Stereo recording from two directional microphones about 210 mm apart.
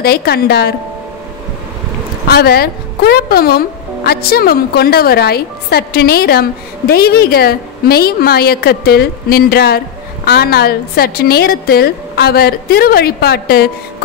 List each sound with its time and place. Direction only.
0.0 s speech: 50° left (ahead or behind)
2.2 s speech: 50° left (ahead or behind)